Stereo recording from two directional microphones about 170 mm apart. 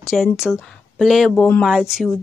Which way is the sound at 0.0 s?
Centre (ahead or behind).